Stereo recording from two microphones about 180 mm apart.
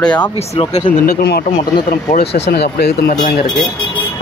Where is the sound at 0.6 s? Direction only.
30° left (ahead or behind).